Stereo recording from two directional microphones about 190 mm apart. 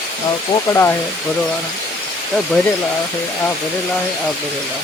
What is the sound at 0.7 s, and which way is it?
Speech, 15° left (ahead or behind).